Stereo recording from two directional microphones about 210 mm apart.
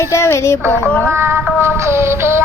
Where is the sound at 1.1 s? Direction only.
10° right (ahead or behind).